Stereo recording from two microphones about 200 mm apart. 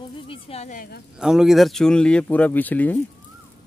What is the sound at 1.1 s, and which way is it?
Speech, centre (ahead or behind).